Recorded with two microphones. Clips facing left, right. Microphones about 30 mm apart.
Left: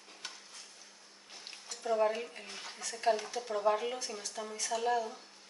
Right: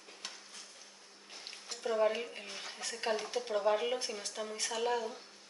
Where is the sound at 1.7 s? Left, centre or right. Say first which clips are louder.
Right 2 dB; right.